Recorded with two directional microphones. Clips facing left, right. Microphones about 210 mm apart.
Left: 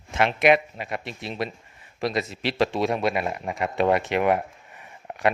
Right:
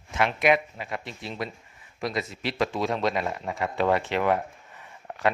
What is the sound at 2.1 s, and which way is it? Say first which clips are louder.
Speech: left 3 dB; 80° left.